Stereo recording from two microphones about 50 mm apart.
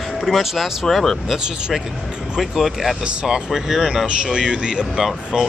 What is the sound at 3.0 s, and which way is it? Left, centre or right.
Speech, centre.